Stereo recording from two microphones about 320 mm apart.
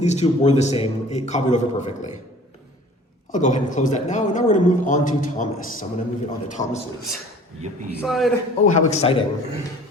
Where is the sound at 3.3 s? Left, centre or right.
Left.